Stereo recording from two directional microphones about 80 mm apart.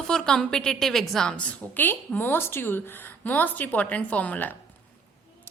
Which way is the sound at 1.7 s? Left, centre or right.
Left.